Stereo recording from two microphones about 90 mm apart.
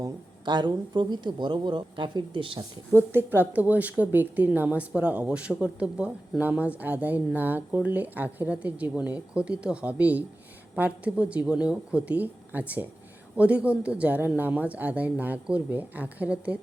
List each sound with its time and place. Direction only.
0.0 s speech: 55° right (ahead or behind)
2.9 s a woman's voice: 25° right (ahead or behind)